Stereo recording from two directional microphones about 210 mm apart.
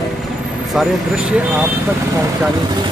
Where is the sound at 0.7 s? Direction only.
Centre (ahead or behind).